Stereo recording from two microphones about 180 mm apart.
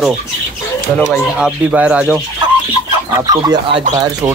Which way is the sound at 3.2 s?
20° right (ahead or behind).